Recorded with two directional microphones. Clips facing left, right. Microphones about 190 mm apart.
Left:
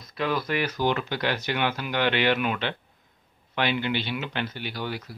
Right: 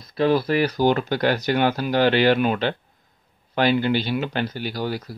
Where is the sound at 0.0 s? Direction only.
35° right (ahead or behind).